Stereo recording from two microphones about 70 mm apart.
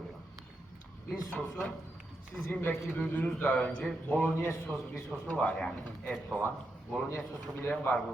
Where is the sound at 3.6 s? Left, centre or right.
Centre.